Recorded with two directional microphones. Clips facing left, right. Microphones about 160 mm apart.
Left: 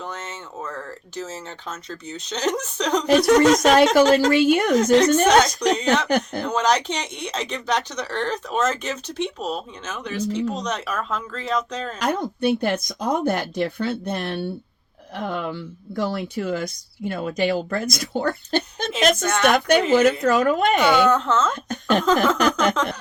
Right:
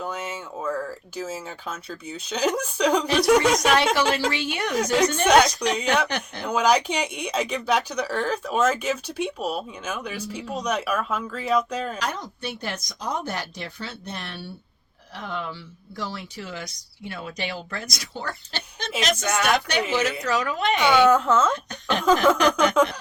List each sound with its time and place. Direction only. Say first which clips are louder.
0.0 s speech: right 2 dB; 10° right (ahead or behind)
3.6 s speech: left 6 dB; 45° left (ahead or behind)
5.3 s speech: left 1 dB; 10° right (ahead or behind)
6.1 s speech: left 9 dB; 45° left (ahead or behind)
6.4 s speech: even; 10° right (ahead or behind)
11.9 s speech: left 7 dB; 55° left (ahead or behind)
19.2 s speech: left 4 dB; 10° right (ahead or behind)
19.9 s speech: left 7 dB; 50° left (ahead or behind)
21.0 s speech: right 1 dB; 10° right (ahead or behind)
21.7 s speech: left 6 dB; 50° left (ahead or behind)
22.0 s speech: right 3 dB; 10° right (ahead or behind)